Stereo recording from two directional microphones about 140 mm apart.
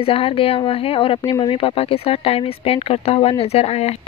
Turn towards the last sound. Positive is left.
turn(degrees=50)  # may be behind; listen again after turning